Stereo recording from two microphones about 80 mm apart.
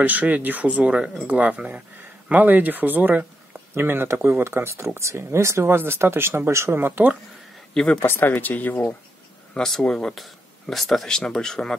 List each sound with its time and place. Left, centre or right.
0.0 s speech: centre
7.7 s speech: centre
8.0 s speech: left
9.5 s speech: centre